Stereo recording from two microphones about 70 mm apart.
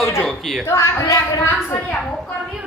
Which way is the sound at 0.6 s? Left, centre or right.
Left.